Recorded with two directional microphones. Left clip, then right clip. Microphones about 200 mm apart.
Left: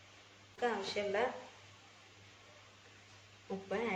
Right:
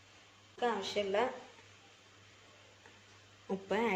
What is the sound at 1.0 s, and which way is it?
Speech, 45° right (ahead or behind).